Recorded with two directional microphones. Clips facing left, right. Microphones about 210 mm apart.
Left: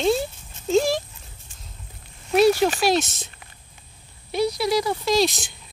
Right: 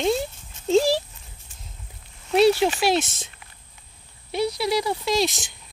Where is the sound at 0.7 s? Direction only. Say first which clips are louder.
Right 1 dB; 35° right (ahead or behind).